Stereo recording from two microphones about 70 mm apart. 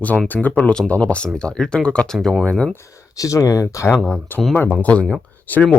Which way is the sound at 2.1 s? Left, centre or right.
Centre.